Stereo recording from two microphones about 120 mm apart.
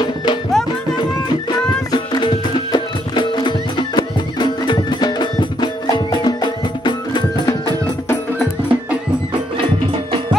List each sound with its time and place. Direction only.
0.0 s music: 40° left (ahead or behind)
1.9 s music: 35° left (ahead or behind)